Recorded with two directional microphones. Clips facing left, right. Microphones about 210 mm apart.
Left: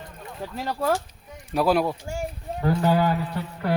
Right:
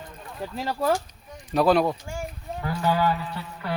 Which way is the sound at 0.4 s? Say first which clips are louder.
Even; 5° right (ahead or behind).